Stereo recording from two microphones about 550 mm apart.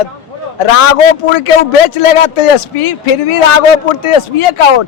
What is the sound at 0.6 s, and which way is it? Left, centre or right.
A man's voice, left.